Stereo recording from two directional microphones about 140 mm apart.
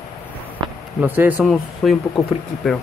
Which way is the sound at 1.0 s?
15° right (ahead or behind).